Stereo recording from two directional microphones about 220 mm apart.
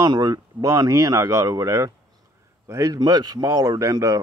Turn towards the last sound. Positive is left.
turn(degrees=-15)  # may be behind; listen again after turning